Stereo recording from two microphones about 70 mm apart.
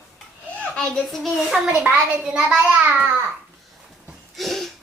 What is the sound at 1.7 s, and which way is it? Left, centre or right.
A child's voice, right.